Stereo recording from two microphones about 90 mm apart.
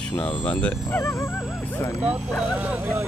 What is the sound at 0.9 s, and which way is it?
Speech, 30° left (ahead or behind).